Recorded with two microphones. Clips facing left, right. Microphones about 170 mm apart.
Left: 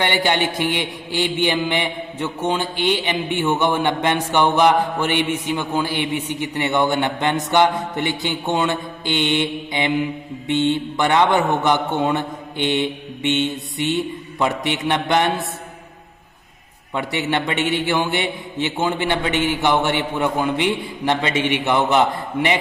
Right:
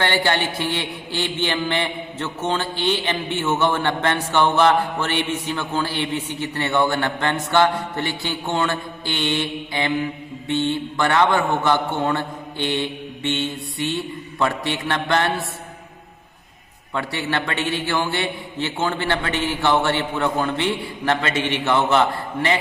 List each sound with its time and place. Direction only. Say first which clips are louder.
0.0 s speech: left 1 dB; 15° left (ahead or behind)
16.9 s speech: left 2 dB; 15° left (ahead or behind)